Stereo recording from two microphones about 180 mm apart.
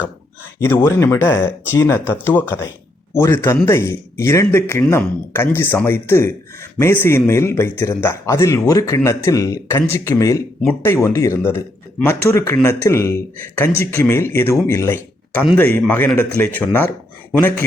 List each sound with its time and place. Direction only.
0.6 s speech: 15° left (ahead or behind)